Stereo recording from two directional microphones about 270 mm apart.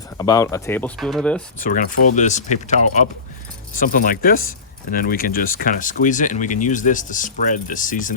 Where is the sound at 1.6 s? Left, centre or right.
Left.